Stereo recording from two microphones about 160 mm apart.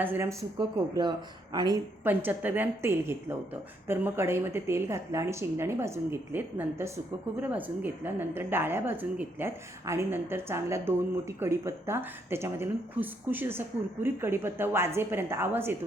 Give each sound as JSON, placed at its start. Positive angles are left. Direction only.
{"t": 0.0, "sound": "a woman's voice", "side_deg": -15}
{"t": 1.5, "sound": "a woman's voice", "side_deg": -25}
{"t": 2.0, "sound": "a woman's voice", "side_deg": -10}